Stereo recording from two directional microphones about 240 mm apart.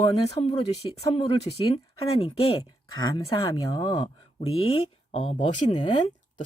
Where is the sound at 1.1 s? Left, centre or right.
Left.